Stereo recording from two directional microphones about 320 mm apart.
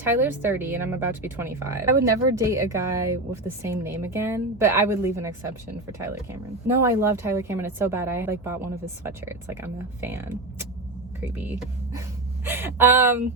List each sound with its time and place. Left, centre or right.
0.0 s speech: centre
6.7 s speech: centre